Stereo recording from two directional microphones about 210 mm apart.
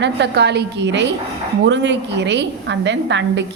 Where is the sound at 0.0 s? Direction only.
55° right (ahead or behind).